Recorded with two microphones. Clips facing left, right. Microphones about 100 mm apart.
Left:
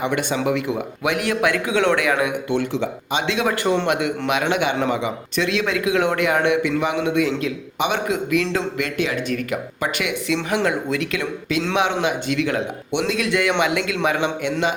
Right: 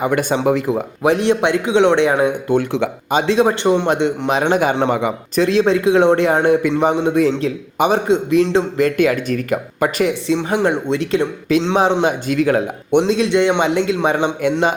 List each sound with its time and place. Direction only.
0.0 s a man's voice: 40° right (ahead or behind)
2.6 s speech: 65° right (ahead or behind)
3.1 s a man's voice: 40° right (ahead or behind)
5.5 s a man's voice: 35° right (ahead or behind)
8.8 s a man's voice: 45° right (ahead or behind)
10.3 s a man's voice: 20° right (ahead or behind); by 13.1 s 40° right (ahead or behind)
13.1 s speech: 30° right (ahead or behind)